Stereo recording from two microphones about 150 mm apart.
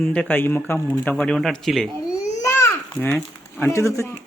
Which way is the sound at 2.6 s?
15° left (ahead or behind).